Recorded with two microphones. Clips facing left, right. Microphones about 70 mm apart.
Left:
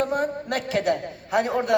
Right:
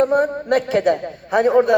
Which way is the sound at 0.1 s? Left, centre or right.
Right.